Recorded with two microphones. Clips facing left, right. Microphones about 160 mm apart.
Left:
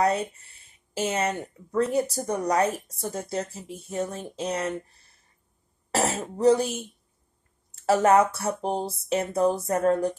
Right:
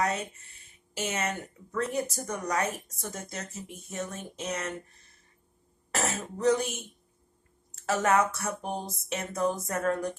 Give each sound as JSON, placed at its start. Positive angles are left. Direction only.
{"t": 0.0, "sound": "speech", "side_deg": 35}
{"t": 5.9, "sound": "throat clearing", "side_deg": 30}
{"t": 6.3, "sound": "speech", "side_deg": 30}